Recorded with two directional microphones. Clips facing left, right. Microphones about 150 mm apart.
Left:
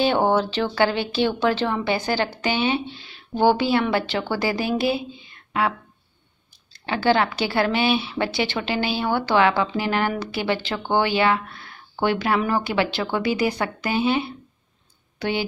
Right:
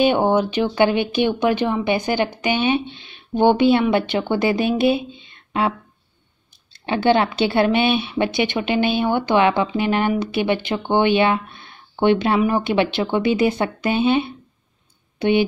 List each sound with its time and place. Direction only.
0.0 s a woman's voice: 15° right (ahead or behind)